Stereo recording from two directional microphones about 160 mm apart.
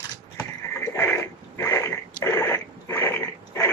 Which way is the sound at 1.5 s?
15° left (ahead or behind).